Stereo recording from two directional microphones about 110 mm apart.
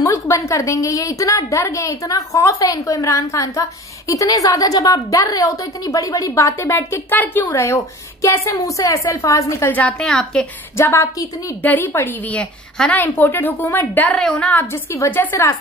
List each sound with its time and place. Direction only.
0.0 s a woman's voice: 30° left (ahead or behind)
9.8 s a woman's voice: 10° left (ahead or behind)
10.8 s a woman's voice: 25° left (ahead or behind)